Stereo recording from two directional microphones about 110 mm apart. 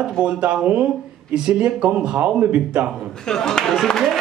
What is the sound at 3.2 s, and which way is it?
Speech, 5° left (ahead or behind).